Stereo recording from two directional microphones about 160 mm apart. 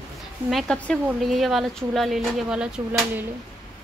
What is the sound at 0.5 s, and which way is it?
Speech, centre (ahead or behind).